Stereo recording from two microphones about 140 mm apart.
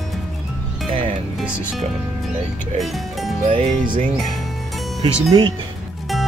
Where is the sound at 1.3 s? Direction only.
5° right (ahead or behind).